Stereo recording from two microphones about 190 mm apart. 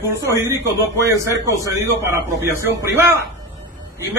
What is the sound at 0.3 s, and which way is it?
A man's voice, 15° right (ahead or behind).